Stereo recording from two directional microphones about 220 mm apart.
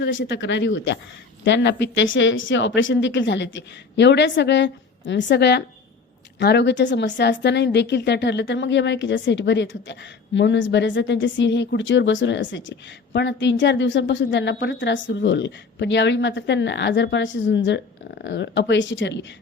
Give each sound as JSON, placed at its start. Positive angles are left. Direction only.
{"t": 0.0, "sound": "speech", "side_deg": 55}